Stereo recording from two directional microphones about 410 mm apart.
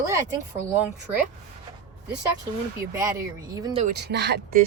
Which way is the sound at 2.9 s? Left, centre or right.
Centre.